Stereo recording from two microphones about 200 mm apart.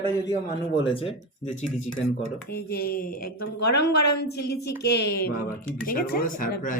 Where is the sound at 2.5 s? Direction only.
50° left (ahead or behind).